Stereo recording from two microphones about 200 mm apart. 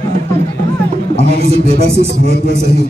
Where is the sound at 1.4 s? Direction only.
30° right (ahead or behind).